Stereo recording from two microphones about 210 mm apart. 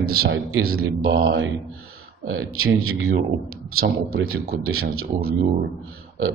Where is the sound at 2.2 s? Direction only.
75° right (ahead or behind).